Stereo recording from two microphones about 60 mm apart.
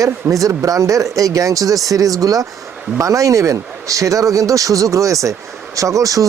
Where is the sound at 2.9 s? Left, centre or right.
Right.